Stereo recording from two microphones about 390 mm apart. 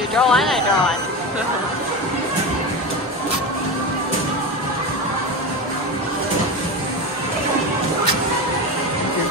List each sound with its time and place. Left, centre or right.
0.1 s speech: centre